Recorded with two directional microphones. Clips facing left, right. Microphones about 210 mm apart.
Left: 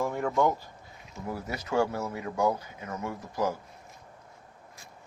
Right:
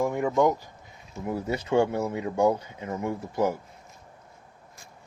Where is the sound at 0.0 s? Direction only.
10° right (ahead or behind).